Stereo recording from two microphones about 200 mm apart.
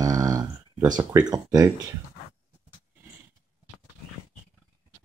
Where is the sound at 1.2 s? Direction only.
20° right (ahead or behind).